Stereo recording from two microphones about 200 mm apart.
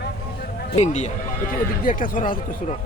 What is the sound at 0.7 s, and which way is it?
A man's voice, 35° left (ahead or behind).